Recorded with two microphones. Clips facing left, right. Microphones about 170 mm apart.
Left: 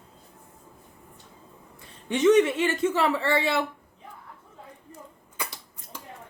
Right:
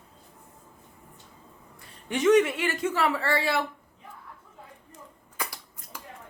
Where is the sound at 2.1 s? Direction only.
25° left (ahead or behind).